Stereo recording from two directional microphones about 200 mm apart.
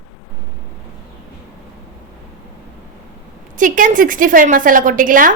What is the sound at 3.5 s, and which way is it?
A woman's voice, 40° right (ahead or behind).